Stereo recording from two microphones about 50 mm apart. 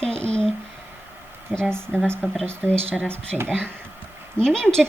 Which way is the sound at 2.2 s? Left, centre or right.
Right.